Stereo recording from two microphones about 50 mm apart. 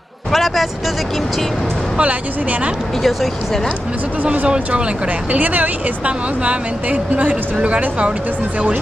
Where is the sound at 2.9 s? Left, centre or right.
Centre.